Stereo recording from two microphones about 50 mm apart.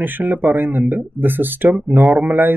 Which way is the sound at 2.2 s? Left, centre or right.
Right.